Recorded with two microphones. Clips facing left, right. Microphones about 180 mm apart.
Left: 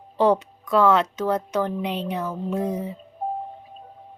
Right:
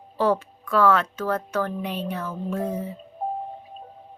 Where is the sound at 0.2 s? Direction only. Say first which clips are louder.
Left 3 dB; 20° left (ahead or behind).